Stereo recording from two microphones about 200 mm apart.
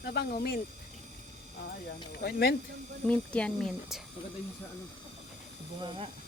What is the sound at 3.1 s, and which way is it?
Speech, 5° left (ahead or behind).